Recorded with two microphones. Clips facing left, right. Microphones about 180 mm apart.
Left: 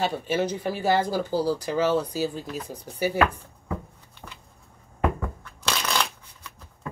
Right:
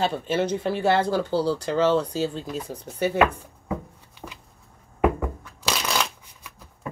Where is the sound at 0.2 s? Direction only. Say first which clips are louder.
Right 2 dB; 15° left (ahead or behind).